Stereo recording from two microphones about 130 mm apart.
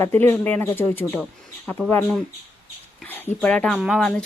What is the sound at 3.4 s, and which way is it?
Speech, 10° left (ahead or behind).